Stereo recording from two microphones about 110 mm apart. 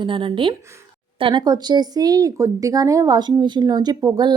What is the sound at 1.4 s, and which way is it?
A woman's voice, 40° right (ahead or behind).